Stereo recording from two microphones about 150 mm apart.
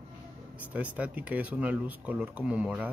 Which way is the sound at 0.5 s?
10° right (ahead or behind).